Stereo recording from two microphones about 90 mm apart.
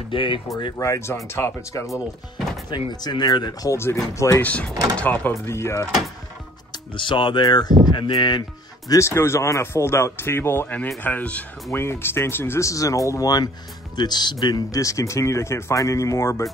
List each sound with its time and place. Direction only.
0.1 s speech: 65° left (ahead or behind)
0.7 s speech: 35° left (ahead or behind)
2.7 s speech: 55° left (ahead or behind)
3.7 s speech: 30° left (ahead or behind)
4.4 s speech: 15° left (ahead or behind)
5.3 s speech: 30° left (ahead or behind)
6.7 s speech: 65° left (ahead or behind)
8.9 s speech: 30° left (ahead or behind)